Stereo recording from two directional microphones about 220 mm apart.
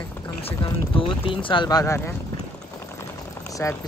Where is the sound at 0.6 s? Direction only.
20° left (ahead or behind).